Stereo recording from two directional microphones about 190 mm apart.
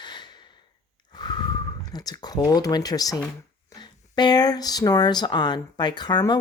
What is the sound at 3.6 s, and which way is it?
Speech, 20° left (ahead or behind).